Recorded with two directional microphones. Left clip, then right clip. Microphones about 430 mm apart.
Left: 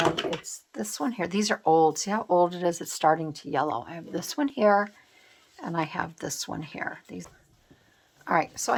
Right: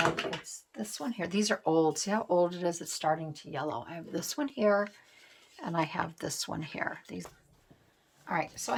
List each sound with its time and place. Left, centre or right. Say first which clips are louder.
0.2 s speech: left 5 dB; centre